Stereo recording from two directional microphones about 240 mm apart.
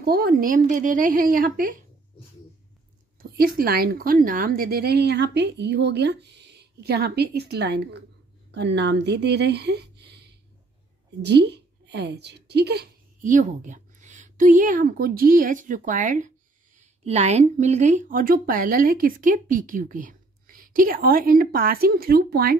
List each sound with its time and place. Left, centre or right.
0.0 s speech: right
3.2 s a woman's voice: right